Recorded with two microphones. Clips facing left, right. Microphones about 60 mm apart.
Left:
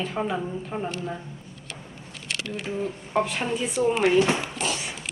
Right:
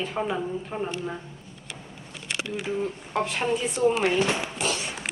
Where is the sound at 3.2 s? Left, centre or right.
Centre.